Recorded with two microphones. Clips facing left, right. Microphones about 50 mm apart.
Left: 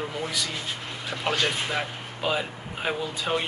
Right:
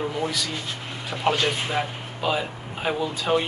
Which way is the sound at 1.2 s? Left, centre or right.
Centre.